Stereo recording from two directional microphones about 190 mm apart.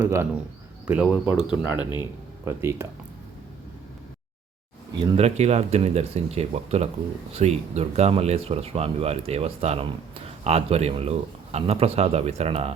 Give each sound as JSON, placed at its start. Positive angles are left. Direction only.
{"t": 0.0, "sound": "speech", "side_deg": -15}
{"t": 1.5, "sound": "speech", "side_deg": 25}
{"t": 2.0, "sound": "speech", "side_deg": -15}
{"t": 4.9, "sound": "speech", "side_deg": -30}